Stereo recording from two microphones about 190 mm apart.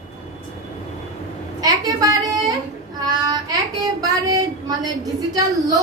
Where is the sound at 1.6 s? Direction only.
20° right (ahead or behind).